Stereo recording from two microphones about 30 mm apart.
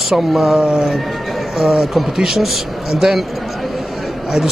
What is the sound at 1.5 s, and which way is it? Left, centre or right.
Speech, centre.